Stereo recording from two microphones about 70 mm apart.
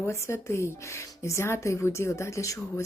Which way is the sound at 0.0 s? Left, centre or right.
Left.